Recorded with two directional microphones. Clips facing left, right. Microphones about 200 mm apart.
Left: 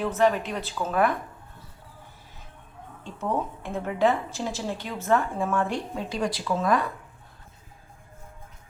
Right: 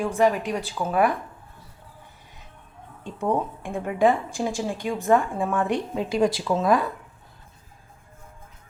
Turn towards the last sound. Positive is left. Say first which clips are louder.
# right 3 dB
turn(degrees=-25)  # may be behind; listen again after turning